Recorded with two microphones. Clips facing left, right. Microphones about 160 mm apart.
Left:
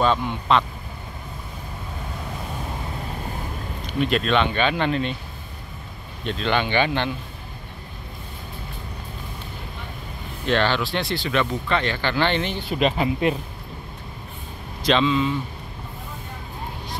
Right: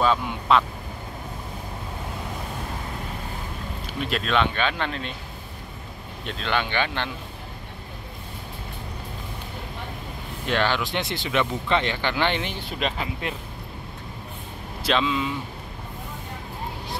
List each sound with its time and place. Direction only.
0.0 s speech: 5° right (ahead or behind)
3.8 s speech: centre (ahead or behind)
6.2 s speech: centre (ahead or behind)
10.4 s speech: 10° right (ahead or behind)
12.6 s speech: 5° left (ahead or behind)
14.8 s speech: 5° right (ahead or behind)